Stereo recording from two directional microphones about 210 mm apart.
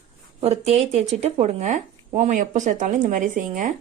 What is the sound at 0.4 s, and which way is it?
A woman's voice, 30° right (ahead or behind).